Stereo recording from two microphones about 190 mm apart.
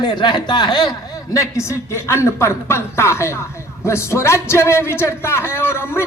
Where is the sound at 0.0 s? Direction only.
20° left (ahead or behind).